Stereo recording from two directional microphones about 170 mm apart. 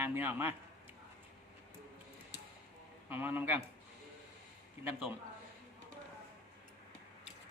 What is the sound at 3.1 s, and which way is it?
Speech, 10° right (ahead or behind).